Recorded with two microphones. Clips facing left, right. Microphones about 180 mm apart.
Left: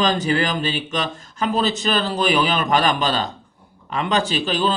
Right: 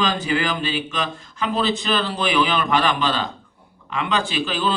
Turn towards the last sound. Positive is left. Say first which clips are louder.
# left 2 dB
turn(degrees=40)  # may be behind; listen again after turning